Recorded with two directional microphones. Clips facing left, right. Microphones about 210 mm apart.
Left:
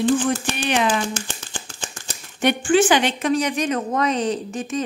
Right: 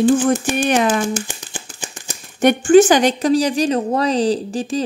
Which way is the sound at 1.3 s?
15° right (ahead or behind).